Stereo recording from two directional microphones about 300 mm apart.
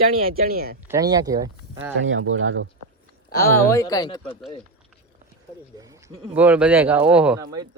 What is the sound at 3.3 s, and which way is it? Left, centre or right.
Speech, centre.